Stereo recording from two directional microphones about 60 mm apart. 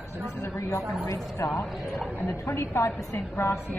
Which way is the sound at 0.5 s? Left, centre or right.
Left.